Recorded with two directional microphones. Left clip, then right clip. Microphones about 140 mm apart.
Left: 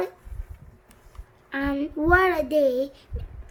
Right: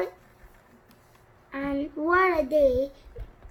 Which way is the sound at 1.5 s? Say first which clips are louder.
Left 3 dB; 45° left (ahead or behind).